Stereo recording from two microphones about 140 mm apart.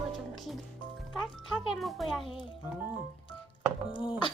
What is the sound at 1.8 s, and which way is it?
Speech, centre (ahead or behind).